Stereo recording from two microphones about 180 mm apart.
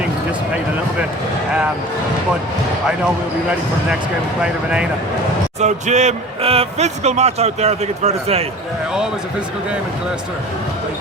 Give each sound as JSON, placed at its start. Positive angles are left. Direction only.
{"t": 5.5, "sound": "speech", "side_deg": -40}